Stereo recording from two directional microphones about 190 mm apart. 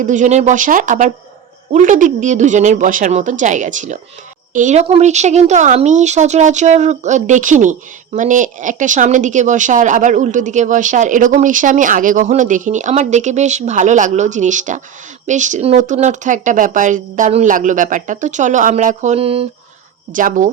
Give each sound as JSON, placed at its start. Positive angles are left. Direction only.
{"t": 0.0, "sound": "speech", "side_deg": -40}
{"t": 20.1, "sound": "speech", "side_deg": -45}